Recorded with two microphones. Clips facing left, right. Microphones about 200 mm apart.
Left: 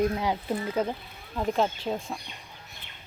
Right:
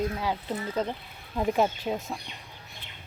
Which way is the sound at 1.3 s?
10° right (ahead or behind).